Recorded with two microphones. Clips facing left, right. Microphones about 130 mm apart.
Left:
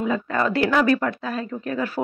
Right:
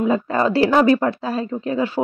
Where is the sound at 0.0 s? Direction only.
30° right (ahead or behind).